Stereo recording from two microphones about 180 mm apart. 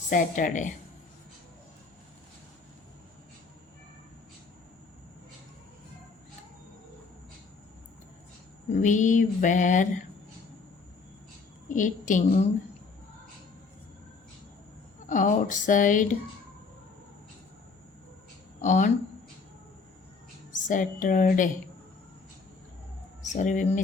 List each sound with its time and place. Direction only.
0.1 s mantra: 45° left (ahead or behind)
8.7 s mantra: 45° left (ahead or behind)
11.7 s mantra: 45° left (ahead or behind)
15.0 s mantra: 45° left (ahead or behind)
18.6 s mantra: 45° left (ahead or behind)
20.5 s mantra: 45° left (ahead or behind)
23.2 s speech: 45° left (ahead or behind)